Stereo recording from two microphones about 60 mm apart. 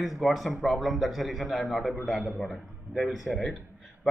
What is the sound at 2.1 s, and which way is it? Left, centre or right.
Speech, right.